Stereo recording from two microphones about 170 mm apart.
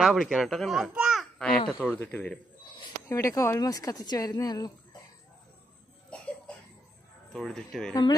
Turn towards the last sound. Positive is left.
turn(degrees=5)  # may be behind; listen again after turning